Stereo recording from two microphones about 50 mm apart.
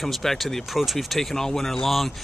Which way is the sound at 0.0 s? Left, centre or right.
Centre.